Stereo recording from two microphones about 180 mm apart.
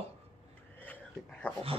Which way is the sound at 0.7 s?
10° left (ahead or behind).